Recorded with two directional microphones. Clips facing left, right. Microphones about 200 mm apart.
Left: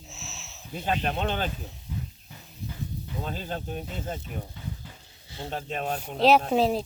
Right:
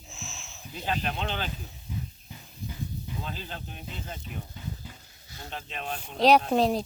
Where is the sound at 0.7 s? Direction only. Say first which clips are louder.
Left 3 dB; 45° left (ahead or behind).